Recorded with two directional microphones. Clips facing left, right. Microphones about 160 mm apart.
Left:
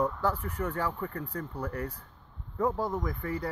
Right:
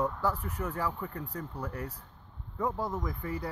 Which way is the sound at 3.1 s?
15° right (ahead or behind).